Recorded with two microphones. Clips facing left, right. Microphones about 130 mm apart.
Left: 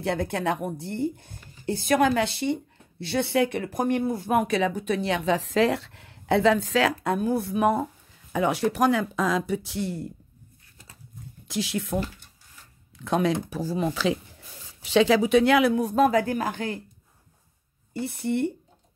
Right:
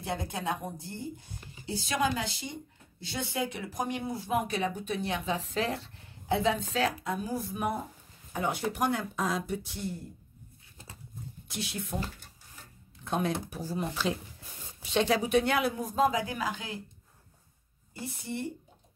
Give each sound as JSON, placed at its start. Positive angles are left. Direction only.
{"t": 0.0, "sound": "speech", "side_deg": 65}
{"t": 11.4, "sound": "speech", "side_deg": 90}
{"t": 17.9, "sound": "speech", "side_deg": 65}